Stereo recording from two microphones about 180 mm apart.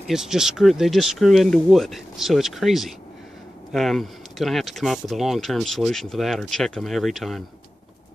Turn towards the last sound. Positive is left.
turn(degrees=0)  # may be behind; listen again after turning